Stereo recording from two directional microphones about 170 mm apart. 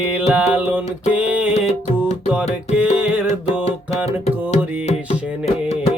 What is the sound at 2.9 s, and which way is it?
Music, 10° right (ahead or behind).